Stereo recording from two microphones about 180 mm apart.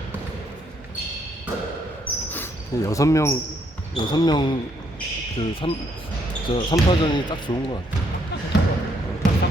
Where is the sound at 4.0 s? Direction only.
25° left (ahead or behind).